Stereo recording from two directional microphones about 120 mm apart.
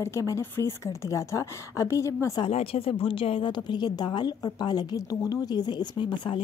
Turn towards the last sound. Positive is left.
turn(degrees=40)  # may be behind; listen again after turning